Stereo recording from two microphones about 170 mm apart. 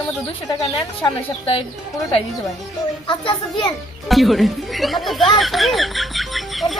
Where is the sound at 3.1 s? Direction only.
30° left (ahead or behind).